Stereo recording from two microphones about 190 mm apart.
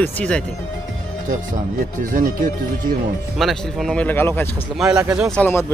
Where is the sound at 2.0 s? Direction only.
45° right (ahead or behind).